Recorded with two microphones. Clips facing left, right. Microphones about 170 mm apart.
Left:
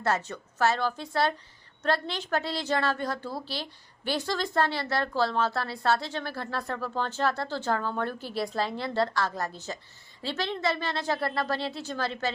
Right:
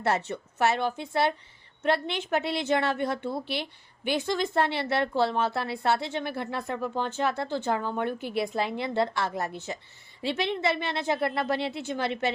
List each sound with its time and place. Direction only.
0.0 s a woman's voice: 25° right (ahead or behind)